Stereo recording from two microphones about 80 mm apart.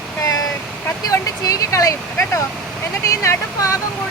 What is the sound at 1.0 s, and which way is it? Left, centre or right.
Vehicle, left.